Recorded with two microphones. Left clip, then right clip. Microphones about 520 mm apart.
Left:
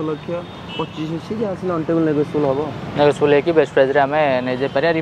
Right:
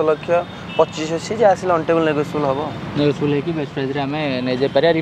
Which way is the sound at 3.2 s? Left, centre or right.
Left.